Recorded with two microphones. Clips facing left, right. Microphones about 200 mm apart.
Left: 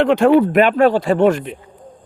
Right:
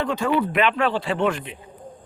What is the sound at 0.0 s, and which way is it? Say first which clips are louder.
Speech: left 11 dB; 70° left (ahead or behind).